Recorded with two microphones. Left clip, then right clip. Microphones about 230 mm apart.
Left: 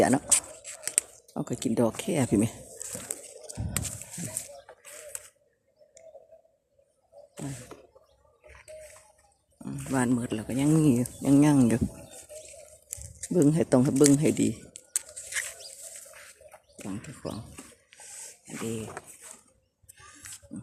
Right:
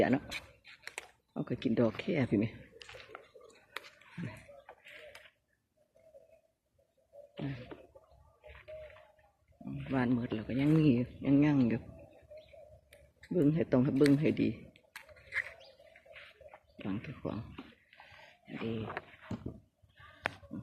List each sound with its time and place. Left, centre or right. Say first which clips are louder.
0.3 s a sound: left 13 dB; centre; by 2.6 s left
9.8 s speech: left 5 dB; centre
13.3 s speech: left 7 dB; left
13.9 s speech: left 5 dB; centre
14.2 s speech: left 6 dB; left
14.7 s biting: left 13 dB; centre
16.7 s speech: left 1 dB; centre
18.4 s a sound: left 4 dB; centre